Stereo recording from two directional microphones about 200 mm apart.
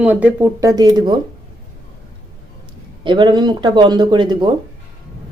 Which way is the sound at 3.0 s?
25° right (ahead or behind).